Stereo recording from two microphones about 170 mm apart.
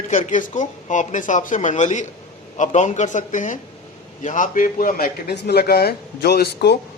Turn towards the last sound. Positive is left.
turn(degrees=75)  # may be behind; listen again after turning